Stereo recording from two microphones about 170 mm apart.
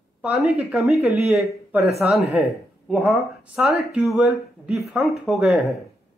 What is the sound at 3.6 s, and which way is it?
Speech, 5° right (ahead or behind).